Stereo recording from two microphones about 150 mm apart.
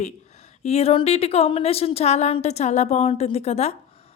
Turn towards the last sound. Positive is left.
turn(degrees=45)  # may be behind; listen again after turning